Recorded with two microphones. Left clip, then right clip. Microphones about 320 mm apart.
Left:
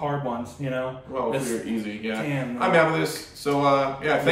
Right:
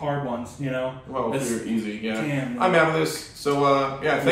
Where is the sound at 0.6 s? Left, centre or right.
Centre.